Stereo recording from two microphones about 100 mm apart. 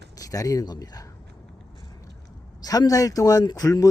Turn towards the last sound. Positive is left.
turn(degrees=35)  # may be behind; listen again after turning